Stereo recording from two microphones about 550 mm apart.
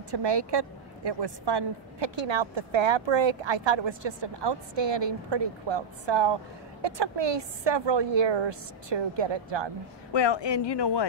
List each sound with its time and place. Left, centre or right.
0.1 s a woman's voice: right
10.1 s a woman's voice: left